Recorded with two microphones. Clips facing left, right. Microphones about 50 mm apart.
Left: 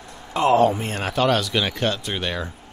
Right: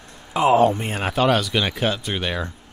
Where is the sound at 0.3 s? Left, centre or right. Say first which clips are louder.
Right 1 dB; centre.